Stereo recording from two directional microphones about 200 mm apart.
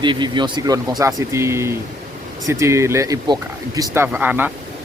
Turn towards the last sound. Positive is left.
turn(degrees=-5)  # may be behind; listen again after turning